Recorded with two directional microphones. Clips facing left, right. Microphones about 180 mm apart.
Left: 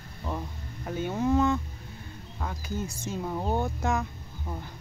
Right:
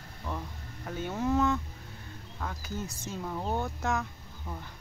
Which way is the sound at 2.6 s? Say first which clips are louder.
Left 4 dB; centre (ahead or behind).